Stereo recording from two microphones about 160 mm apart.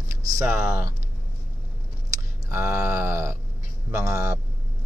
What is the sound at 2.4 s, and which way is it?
Speech, 15° right (ahead or behind).